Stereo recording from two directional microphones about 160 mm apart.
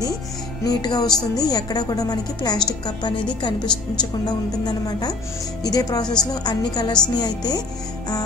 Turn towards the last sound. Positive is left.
turn(degrees=25)  # may be behind; listen again after turning